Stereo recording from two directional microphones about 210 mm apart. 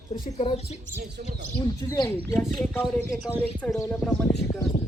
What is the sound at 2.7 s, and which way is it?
Speech, 5° left (ahead or behind).